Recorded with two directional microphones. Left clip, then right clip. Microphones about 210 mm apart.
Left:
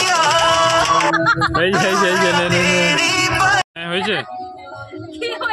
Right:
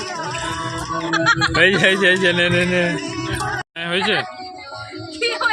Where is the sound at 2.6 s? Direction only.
45° left (ahead or behind).